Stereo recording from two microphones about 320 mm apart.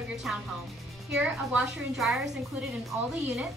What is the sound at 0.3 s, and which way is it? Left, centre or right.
Music, centre.